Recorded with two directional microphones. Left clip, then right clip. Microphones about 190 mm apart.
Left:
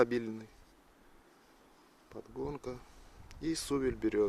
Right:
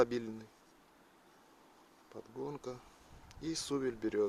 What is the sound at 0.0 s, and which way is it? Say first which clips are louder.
Speech: left 2 dB; 20° left (ahead or behind).